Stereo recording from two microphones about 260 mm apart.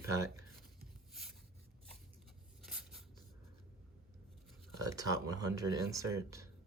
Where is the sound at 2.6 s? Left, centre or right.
Centre.